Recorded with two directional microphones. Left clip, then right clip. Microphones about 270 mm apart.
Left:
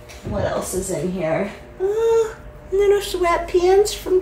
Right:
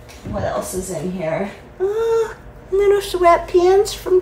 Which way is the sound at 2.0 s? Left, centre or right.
Centre.